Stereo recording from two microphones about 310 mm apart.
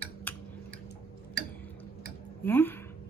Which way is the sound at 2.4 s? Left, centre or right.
Centre.